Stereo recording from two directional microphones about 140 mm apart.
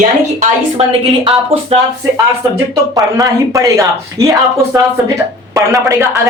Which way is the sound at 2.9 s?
25° right (ahead or behind).